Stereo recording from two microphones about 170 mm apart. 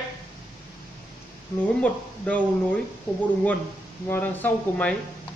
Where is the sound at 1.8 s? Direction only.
10° left (ahead or behind).